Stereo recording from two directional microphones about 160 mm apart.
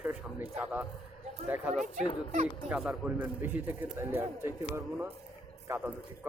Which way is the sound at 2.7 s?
5° right (ahead or behind).